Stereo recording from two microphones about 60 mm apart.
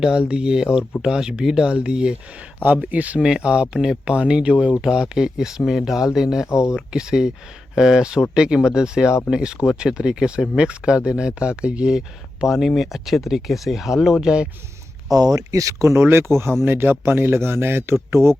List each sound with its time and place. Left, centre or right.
0.0 s speech: centre
3.2 s speech: centre
6.5 s speech: left
6.7 s speech: centre
12.5 s speech: centre
15.1 s speech: right